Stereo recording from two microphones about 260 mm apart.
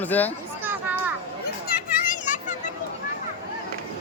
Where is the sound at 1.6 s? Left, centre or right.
Left.